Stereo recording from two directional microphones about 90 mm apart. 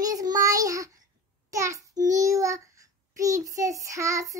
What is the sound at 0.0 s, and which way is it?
Child singing, 45° right (ahead or behind).